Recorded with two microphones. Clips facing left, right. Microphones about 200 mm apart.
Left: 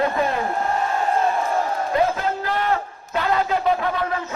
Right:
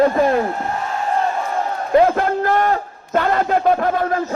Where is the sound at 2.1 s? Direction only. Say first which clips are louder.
Right 6 dB; 55° right (ahead or behind).